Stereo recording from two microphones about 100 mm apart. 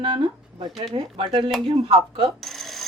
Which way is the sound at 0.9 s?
65° right (ahead or behind).